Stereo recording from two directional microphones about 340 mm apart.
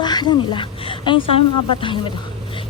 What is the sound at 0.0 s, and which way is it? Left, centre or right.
Speech, centre.